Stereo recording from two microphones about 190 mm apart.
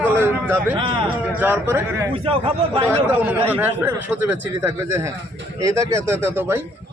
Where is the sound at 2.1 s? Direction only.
30° right (ahead or behind).